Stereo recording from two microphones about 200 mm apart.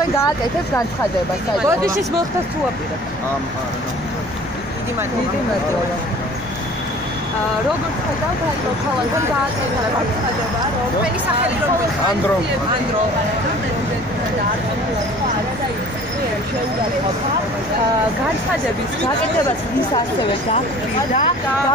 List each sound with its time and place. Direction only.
1.7 s speech: 15° right (ahead or behind)